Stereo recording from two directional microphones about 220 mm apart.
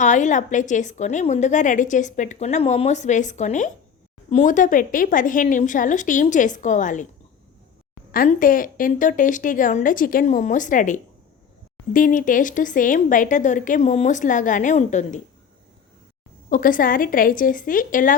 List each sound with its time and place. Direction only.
0.0 s a woman's voice: 35° left (ahead or behind)
8.1 s a woman's voice: 40° left (ahead or behind)
16.5 s a woman's voice: 40° left (ahead or behind)